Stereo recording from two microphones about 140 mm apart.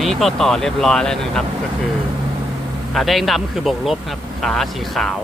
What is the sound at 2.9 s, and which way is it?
Speech, centre (ahead or behind).